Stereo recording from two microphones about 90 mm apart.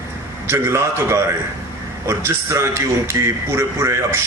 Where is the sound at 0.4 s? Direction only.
30° right (ahead or behind).